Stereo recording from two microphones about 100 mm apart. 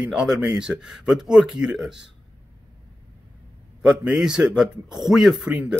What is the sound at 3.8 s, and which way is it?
Speech, 5° right (ahead or behind).